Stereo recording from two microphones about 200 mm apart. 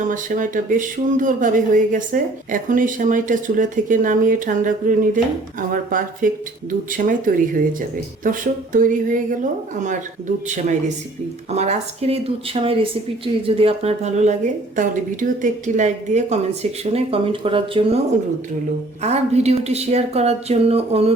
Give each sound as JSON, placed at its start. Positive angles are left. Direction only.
{"t": 0.0, "sound": "speech", "side_deg": -40}
{"t": 19.0, "sound": "speech", "side_deg": -35}